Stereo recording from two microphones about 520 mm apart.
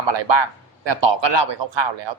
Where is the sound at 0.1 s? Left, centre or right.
Right.